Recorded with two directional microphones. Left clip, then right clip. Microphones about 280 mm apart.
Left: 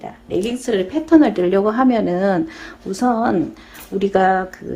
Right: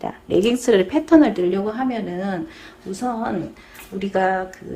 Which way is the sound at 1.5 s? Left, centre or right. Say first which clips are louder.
Left 8 dB; centre.